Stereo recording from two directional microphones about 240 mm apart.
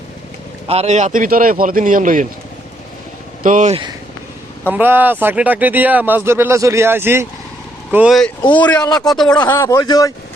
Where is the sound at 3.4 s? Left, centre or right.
Right.